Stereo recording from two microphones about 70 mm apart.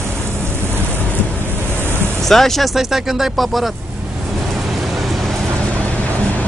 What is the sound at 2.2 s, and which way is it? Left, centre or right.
Speech, centre.